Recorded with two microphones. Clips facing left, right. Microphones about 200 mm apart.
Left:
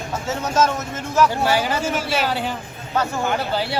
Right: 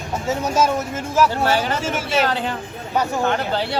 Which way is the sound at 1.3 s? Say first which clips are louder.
Even; 15° left (ahead or behind).